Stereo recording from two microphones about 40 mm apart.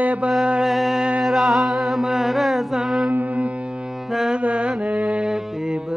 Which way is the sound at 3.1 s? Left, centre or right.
Right.